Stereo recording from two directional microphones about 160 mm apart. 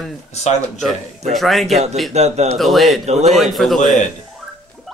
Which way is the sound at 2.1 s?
45° right (ahead or behind).